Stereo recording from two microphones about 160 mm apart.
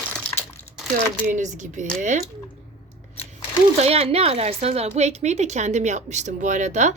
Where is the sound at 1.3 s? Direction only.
50° right (ahead or behind).